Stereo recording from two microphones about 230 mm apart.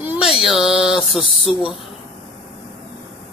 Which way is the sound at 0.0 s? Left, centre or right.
Centre.